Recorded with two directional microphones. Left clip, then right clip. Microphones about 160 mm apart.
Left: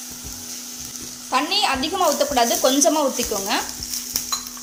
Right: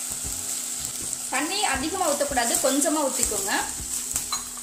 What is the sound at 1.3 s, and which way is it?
Speech, 55° left (ahead or behind).